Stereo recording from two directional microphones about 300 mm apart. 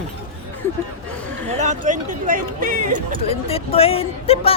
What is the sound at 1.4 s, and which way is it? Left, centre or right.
Speech, right.